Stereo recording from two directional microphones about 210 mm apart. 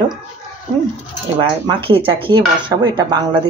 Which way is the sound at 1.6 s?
25° right (ahead or behind).